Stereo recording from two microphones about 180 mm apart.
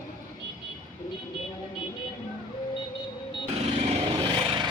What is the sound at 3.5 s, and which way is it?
Vehicle, 35° right (ahead or behind).